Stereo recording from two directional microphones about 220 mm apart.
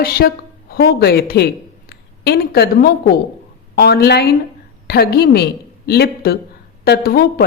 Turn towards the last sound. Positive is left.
turn(degrees=45)  # may be behind; listen again after turning